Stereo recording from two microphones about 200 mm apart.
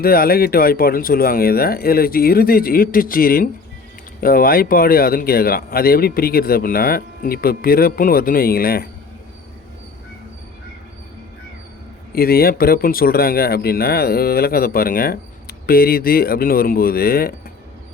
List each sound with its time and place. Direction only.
0.0 s speech: 50° left (ahead or behind)
12.1 s speech: 50° left (ahead or behind)